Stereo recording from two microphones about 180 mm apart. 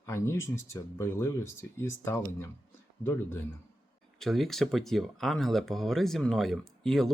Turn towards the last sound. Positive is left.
turn(degrees=0)  # may be behind; listen again after turning